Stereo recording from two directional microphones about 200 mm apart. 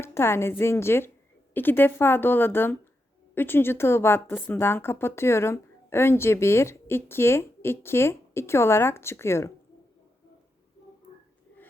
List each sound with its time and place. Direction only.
0.0 s a woman's voice: 10° left (ahead or behind)